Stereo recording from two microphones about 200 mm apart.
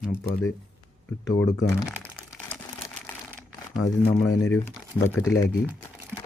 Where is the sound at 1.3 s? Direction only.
15° left (ahead or behind).